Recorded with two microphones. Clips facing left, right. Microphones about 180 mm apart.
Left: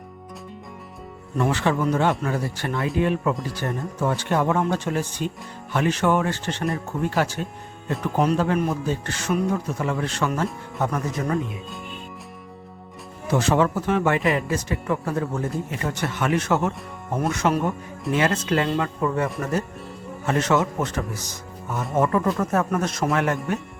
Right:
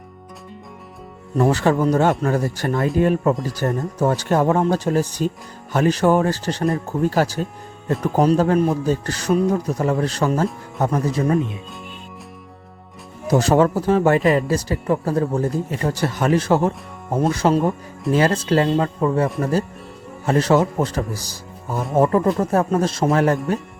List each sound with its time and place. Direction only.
1.4 s speech: 40° right (ahead or behind)
13.2 s speech: 40° right (ahead or behind)